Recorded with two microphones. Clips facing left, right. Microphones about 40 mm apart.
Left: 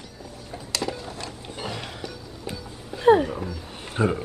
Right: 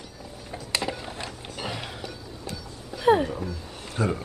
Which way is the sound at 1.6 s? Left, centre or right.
Centre.